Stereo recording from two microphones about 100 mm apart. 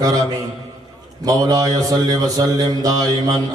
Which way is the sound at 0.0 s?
40° right (ahead or behind).